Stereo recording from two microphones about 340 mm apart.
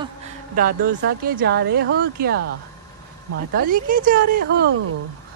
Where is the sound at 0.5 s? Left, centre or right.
Right.